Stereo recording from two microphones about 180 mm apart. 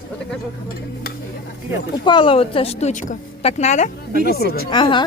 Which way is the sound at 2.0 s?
25° left (ahead or behind).